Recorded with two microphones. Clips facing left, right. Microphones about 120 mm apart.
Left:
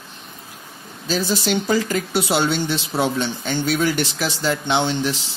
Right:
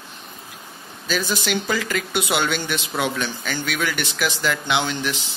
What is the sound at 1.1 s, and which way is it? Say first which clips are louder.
Speech: left 3 dB; 35° left (ahead or behind).